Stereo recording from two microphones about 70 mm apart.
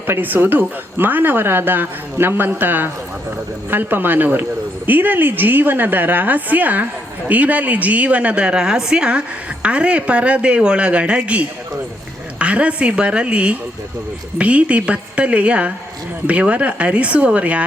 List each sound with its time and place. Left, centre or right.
0.1 s speech: right